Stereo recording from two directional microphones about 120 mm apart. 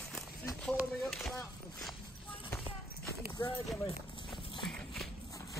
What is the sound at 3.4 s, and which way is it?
Speech, 35° left (ahead or behind).